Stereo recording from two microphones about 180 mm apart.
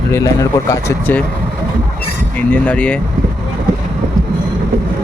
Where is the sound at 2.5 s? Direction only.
5° left (ahead or behind).